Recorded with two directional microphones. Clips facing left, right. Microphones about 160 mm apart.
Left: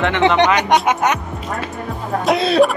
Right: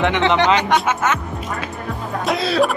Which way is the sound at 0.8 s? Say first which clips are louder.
Left 3 dB; 15° left (ahead or behind).